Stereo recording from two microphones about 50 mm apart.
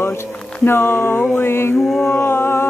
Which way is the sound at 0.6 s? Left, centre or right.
Left.